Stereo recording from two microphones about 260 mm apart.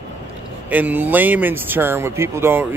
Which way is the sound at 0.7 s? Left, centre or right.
Centre.